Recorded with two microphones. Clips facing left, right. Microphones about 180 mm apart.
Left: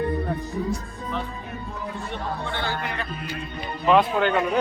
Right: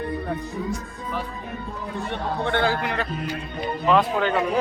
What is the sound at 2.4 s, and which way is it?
Speech, 60° right (ahead or behind).